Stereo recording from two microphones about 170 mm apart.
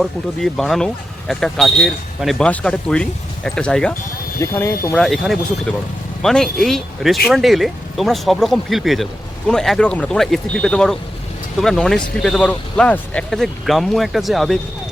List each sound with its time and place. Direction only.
0.0 s speech: centre (ahead or behind)
4.4 s speech: 15° left (ahead or behind)
4.9 s speech: centre (ahead or behind)